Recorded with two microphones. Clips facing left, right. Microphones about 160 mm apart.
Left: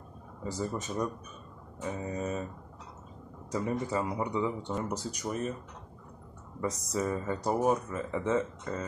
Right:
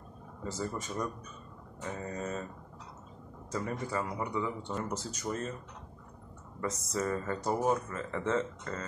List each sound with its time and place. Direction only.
0.4 s speech: 15° left (ahead or behind)
3.5 s speech: 20° left (ahead or behind)
7.1 s speech: 15° left (ahead or behind)